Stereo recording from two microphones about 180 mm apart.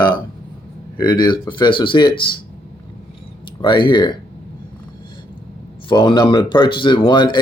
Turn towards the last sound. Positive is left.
turn(degrees=25)  # may be behind; listen again after turning